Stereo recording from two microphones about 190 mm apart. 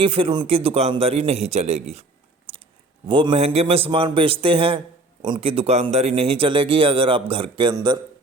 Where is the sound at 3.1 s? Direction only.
25° right (ahead or behind).